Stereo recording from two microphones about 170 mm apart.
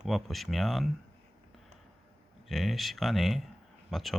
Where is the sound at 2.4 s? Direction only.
Centre (ahead or behind).